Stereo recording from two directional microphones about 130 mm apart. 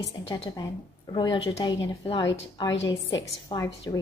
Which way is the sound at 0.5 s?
30° left (ahead or behind).